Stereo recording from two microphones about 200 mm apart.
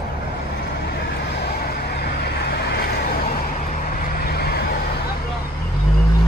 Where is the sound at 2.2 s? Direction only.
50° left (ahead or behind).